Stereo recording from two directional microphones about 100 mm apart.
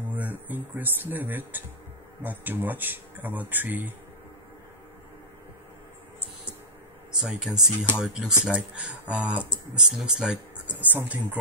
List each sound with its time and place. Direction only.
0.1 s speech: 20° right (ahead or behind)
7.2 s speech: 5° right (ahead or behind)